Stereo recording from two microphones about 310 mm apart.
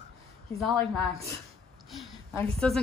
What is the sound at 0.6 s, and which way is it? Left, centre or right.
Speech, centre.